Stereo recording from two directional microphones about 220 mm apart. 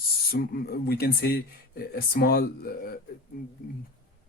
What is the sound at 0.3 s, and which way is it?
Speech, 45° left (ahead or behind).